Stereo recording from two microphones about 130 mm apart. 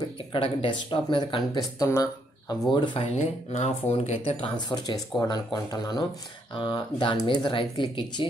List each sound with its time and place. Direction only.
0.3 s speech: 40° left (ahead or behind); by 2.5 s 25° left (ahead or behind)
2.7 s speech: 40° left (ahead or behind)
3.2 s speech: 60° left (ahead or behind)
4.6 s speech: 35° left (ahead or behind)